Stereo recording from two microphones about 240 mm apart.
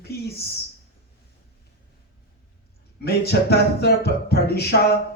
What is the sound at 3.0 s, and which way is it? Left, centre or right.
Speech, left.